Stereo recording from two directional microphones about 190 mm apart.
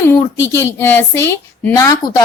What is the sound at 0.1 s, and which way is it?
Speech, 15° left (ahead or behind).